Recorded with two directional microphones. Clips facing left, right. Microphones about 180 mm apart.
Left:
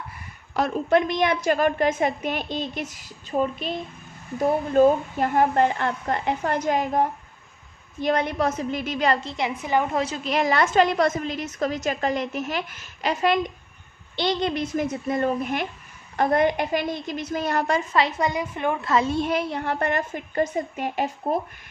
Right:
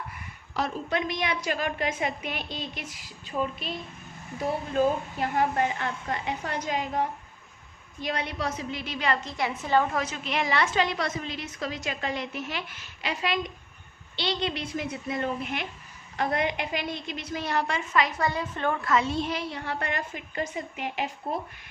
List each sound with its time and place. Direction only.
0.5 s a woman's voice: 50° left (ahead or behind)
9.2 s a woman's voice: 25° left (ahead or behind)
9.6 s a woman's voice: 15° left (ahead or behind)
9.9 s a woman's voice: 30° left (ahead or behind)
18.2 s a woman's voice: 15° left (ahead or behind)
18.9 s a woman's voice: 35° left (ahead or behind)
19.1 s a woman's voice: 55° left (ahead or behind)